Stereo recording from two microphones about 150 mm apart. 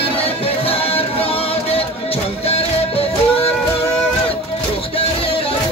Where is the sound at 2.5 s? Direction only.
40° left (ahead or behind).